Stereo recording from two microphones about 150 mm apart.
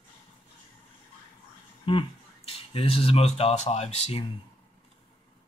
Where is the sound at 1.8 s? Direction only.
35° left (ahead or behind).